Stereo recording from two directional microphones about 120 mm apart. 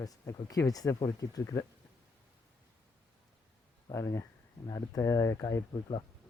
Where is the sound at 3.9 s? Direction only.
25° left (ahead or behind).